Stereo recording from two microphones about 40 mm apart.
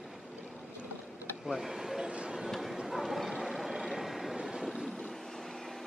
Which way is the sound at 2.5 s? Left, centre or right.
Centre.